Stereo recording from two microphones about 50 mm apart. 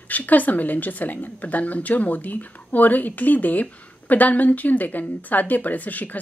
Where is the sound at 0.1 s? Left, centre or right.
Left.